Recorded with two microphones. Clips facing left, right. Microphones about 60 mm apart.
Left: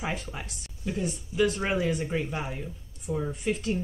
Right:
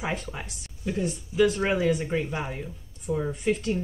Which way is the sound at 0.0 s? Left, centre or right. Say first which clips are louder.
Right 2 dB; centre.